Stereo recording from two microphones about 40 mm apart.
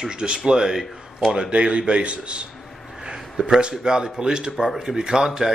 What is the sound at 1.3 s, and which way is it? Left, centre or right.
A man's voice, right.